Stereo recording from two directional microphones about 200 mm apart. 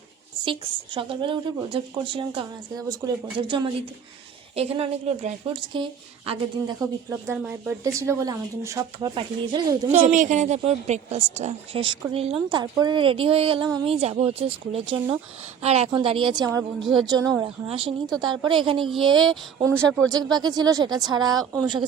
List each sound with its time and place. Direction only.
0.4 s a woman's voice: 25° right (ahead or behind)
10.1 s a woman's voice: 40° right (ahead or behind)
19.7 s speech: 5° left (ahead or behind)
20.3 s a woman's voice: 20° right (ahead or behind)